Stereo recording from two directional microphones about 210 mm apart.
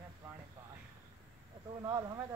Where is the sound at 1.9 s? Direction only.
20° right (ahead or behind).